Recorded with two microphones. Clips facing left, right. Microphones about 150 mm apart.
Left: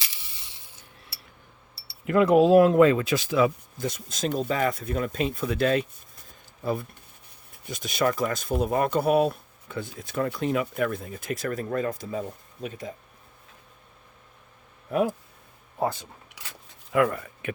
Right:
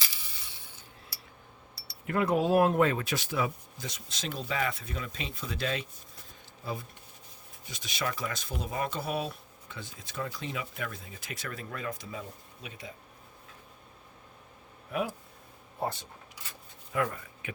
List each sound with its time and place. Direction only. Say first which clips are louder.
2.0 s speech: left 9 dB; 90° left
3.8 s speech: left 11 dB; 50° left (ahead or behind)
7.5 s speech: left 9 dB; 50° left (ahead or behind)
14.9 s speech: left 8 dB; 40° left (ahead or behind)
16.9 s speech: left 8 dB; 80° left